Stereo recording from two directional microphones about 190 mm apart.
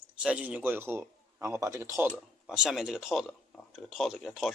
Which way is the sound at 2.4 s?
5° right (ahead or behind).